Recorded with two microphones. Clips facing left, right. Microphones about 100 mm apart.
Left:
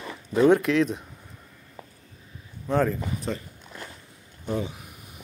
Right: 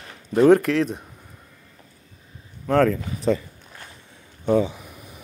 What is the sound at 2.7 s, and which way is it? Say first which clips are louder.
Speech: right 5 dB; 90° right.